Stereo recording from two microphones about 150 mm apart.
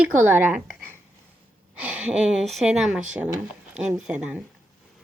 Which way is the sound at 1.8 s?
10° right (ahead or behind).